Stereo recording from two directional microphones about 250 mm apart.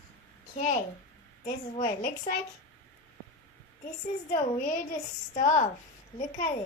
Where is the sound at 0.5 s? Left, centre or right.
Left.